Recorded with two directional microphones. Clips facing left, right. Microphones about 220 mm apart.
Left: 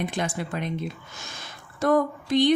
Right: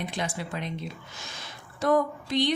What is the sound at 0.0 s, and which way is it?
Speech, 50° left (ahead or behind).